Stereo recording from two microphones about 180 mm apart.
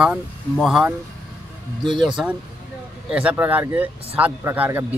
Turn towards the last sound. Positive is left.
turn(degrees=-10)  # may be behind; listen again after turning